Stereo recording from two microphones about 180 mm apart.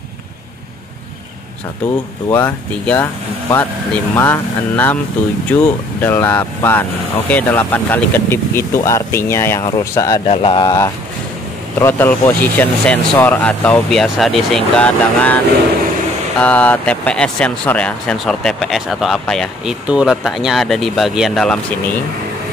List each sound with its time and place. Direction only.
2.2 s speech: 10° left (ahead or behind)
10.2 s speech: 35° left (ahead or behind)
11.8 s speech: 10° left (ahead or behind)